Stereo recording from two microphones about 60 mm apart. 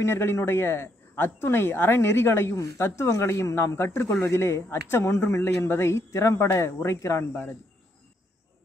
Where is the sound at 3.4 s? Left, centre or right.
Left.